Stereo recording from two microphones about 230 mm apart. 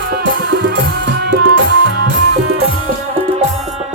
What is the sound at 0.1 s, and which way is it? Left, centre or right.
Music, right.